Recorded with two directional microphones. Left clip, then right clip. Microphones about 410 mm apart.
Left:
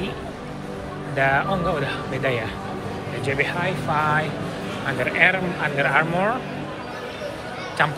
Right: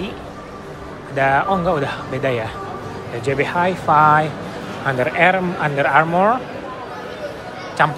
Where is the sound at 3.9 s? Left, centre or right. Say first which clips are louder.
Right 10 dB; centre.